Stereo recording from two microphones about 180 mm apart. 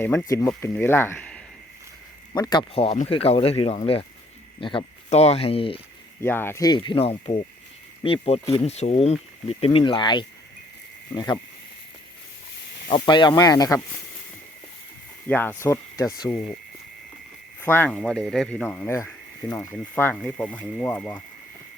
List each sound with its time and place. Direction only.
0.0 s speech: 10° left (ahead or behind)
2.3 s speech: 25° left (ahead or behind)
6.2 s speech: 10° left (ahead or behind)
12.9 s speech: 25° left (ahead or behind)
15.3 s speech: 10° left (ahead or behind)
17.6 s speech: 10° left (ahead or behind)